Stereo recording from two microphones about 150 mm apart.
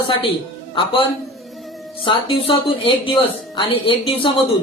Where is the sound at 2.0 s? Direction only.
35° left (ahead or behind).